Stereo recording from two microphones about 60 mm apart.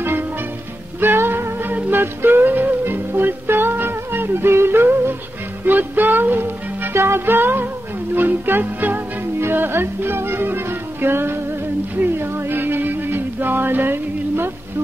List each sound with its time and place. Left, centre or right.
1.0 s music: right